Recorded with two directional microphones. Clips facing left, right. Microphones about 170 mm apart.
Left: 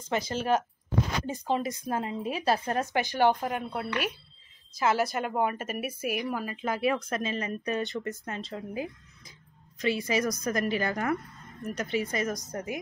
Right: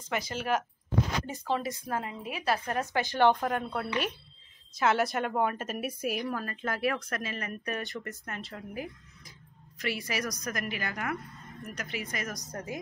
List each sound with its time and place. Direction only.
0.1 s speech: 30° left (ahead or behind)
3.2 s a woman's voice: 5° left (ahead or behind)
6.3 s speech: 15° left (ahead or behind)